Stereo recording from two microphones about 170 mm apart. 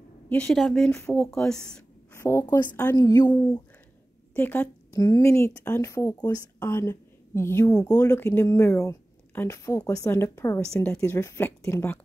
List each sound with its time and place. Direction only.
0.3 s speech: 5° left (ahead or behind)
2.1 s speech: 15° left (ahead or behind)
4.3 s speech: 10° left (ahead or behind)
10.7 s speech: 5° left (ahead or behind)
11.0 s speech: 15° left (ahead or behind)